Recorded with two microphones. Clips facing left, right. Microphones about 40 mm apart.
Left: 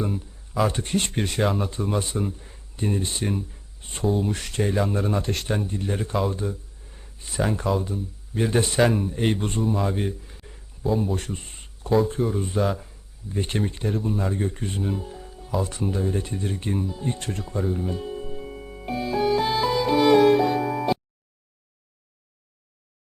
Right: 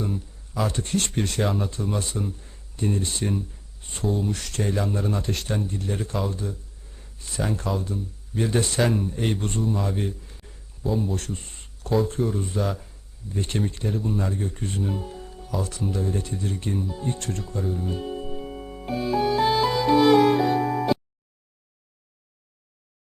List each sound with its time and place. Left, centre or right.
0.0 s a sound: centre
0.7 s speech: left
1.4 s speech: centre
2.0 s speech: centre
4.3 s speech: left; by 5.5 s centre
5.5 s speech: centre
10.8 s speech: centre
11.1 s a sound: left
11.9 s speech: centre
13.8 s speech: centre
14.5 s speech: centre
16.2 s speech: left
16.6 s speech: centre
19.5 s music: centre